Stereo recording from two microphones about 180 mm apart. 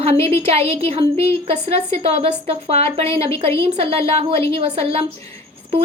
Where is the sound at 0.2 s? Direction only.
15° left (ahead or behind).